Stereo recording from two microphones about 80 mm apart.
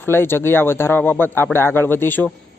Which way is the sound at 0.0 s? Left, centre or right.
Left.